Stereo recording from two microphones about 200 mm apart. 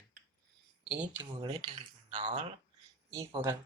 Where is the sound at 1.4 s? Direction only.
20° right (ahead or behind).